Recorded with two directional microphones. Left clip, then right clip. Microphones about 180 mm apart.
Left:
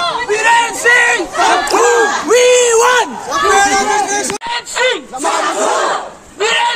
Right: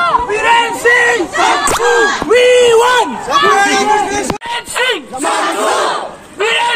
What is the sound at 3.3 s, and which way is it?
Speech, 50° left (ahead or behind).